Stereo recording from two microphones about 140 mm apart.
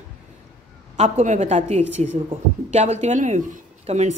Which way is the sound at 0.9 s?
55° right (ahead or behind).